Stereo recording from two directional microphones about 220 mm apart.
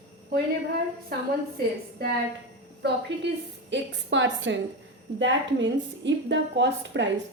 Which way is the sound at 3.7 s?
55° right (ahead or behind).